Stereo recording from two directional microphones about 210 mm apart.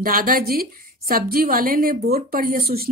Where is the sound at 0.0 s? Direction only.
40° right (ahead or behind).